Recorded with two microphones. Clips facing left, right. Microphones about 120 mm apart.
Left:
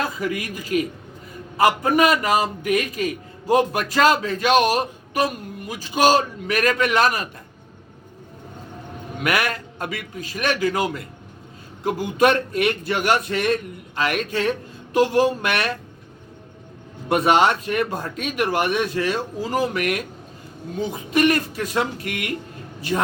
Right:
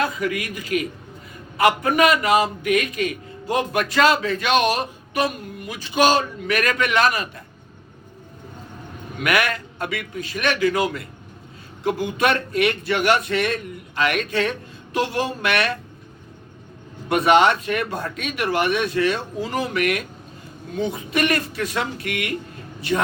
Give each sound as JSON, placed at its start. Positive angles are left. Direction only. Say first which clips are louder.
{"t": 0.2, "sound": "a man's voice", "louder": "right 1 dB", "side_deg": 30}
{"t": 9.2, "sound": "a man's voice", "louder": "right 1 dB", "side_deg": 35}
{"t": 11.8, "sound": "a man's voice", "louder": "left 2 dB", "side_deg": 40}
{"t": 17.1, "sound": "a man's voice", "louder": "right 1 dB", "side_deg": 35}
{"t": 21.1, "sound": "a man's voice", "louder": "left 6 dB", "side_deg": 40}